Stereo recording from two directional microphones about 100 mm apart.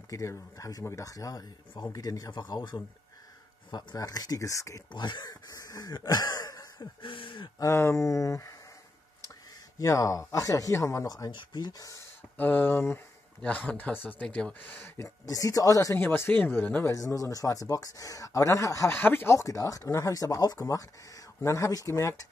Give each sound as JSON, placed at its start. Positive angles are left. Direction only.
{"t": 0.1, "sound": "speech", "side_deg": 30}
{"t": 4.9, "sound": "speech", "side_deg": 50}
{"t": 7.0, "sound": "speech", "side_deg": 60}
{"t": 7.5, "sound": "speech", "side_deg": 30}
{"t": 9.8, "sound": "speech", "side_deg": 35}
{"t": 12.4, "sound": "speech", "side_deg": 20}
{"t": 15.0, "sound": "speech", "side_deg": 35}
{"t": 16.0, "sound": "speech", "side_deg": 20}
{"t": 16.8, "sound": "speech", "side_deg": 35}
{"t": 18.9, "sound": "speech", "side_deg": 20}